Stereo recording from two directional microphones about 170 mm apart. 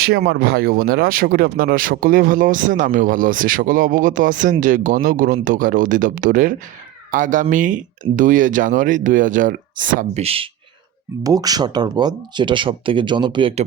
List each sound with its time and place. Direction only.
0.0 s speech: 70° right (ahead or behind); by 10.2 s 50° right (ahead or behind)
10.2 s speech: 35° right (ahead or behind)
11.2 s speech: 20° right (ahead or behind)